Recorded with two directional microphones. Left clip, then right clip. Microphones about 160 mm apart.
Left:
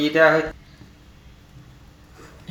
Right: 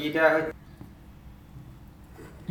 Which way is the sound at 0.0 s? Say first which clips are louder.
Left 8 dB; 25° left (ahead or behind).